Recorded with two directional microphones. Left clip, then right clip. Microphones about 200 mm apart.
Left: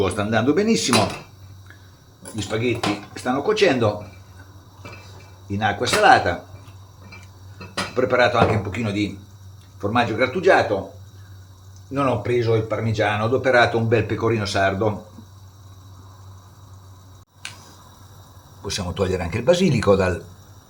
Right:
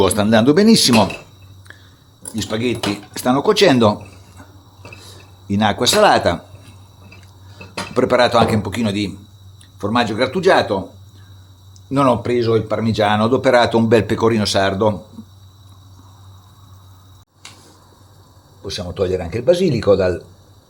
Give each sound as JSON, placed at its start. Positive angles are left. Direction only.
{"t": 0.0, "sound": "speech", "side_deg": -45}
{"t": 2.3, "sound": "speech", "side_deg": -50}
{"t": 5.5, "sound": "speech", "side_deg": -60}
{"t": 7.9, "sound": "speech", "side_deg": -55}
{"t": 11.9, "sound": "speech", "side_deg": -65}
{"t": 18.6, "sound": "a man's voice", "side_deg": -10}